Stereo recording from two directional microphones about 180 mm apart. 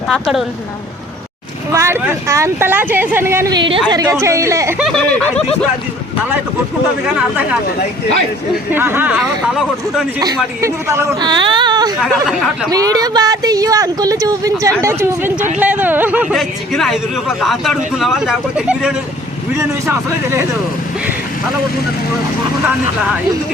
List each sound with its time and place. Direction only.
0.1 s speech: centre (ahead or behind)
1.7 s speech: 15° right (ahead or behind)
4.8 s speech: centre (ahead or behind)
8.7 s speech: 10° right (ahead or behind)
10.2 s speech: 20° right (ahead or behind)